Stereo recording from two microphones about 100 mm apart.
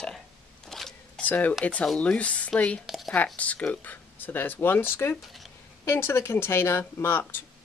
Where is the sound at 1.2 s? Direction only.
15° left (ahead or behind).